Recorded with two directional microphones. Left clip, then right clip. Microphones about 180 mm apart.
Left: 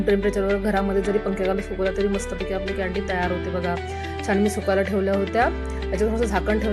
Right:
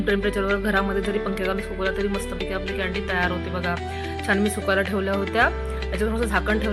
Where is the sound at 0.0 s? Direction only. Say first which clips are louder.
Left 2 dB; 5° left (ahead or behind).